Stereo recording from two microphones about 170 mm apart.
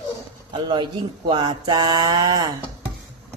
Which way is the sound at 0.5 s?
25° right (ahead or behind).